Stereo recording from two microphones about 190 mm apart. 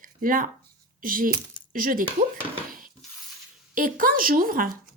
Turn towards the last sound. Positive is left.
turn(degrees=-50)  # may be behind; listen again after turning